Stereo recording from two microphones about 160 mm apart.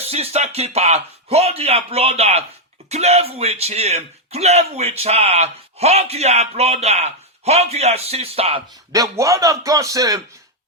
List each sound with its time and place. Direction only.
0.0 s speech: 40° right (ahead or behind)
8.9 s speech: 20° right (ahead or behind)